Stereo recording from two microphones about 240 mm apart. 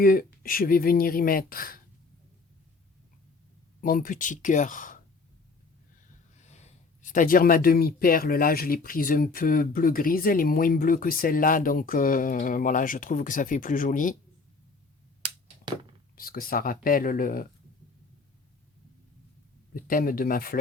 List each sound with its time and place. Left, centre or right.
0.0 s speech: left
3.8 s speech: left
6.4 s speech: left
15.2 s a sound: right
16.1 s speech: left
19.7 s speech: left